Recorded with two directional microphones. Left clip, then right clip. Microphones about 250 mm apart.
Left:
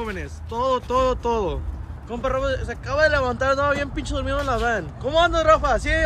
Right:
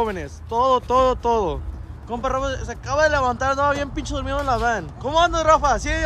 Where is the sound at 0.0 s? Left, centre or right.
Centre.